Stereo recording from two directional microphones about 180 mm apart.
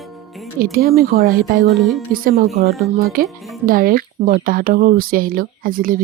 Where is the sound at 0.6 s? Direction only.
55° right (ahead or behind).